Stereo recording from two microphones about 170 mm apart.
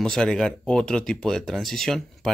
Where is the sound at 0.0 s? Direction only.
5° left (ahead or behind).